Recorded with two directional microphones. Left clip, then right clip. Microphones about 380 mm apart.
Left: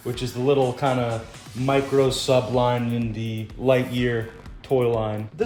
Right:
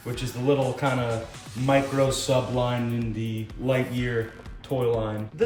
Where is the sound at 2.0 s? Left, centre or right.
Centre.